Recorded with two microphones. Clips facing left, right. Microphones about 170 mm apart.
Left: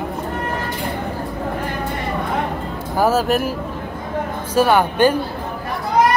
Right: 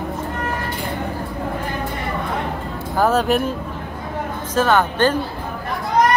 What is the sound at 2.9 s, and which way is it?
Speech, 5° left (ahead or behind).